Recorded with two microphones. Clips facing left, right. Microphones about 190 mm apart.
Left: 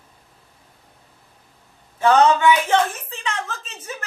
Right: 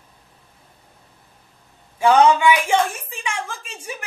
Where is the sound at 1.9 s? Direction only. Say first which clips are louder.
Right 1 dB; 10° right (ahead or behind).